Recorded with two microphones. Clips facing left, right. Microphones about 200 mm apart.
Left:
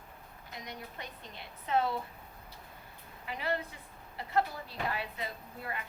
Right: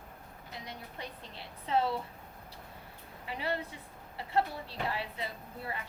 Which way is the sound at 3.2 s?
30° right (ahead or behind).